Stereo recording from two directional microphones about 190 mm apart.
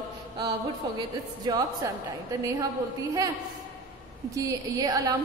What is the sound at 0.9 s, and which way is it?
Speech, 20° right (ahead or behind).